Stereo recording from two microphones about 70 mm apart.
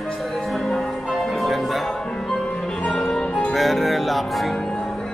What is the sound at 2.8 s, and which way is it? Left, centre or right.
Music, centre.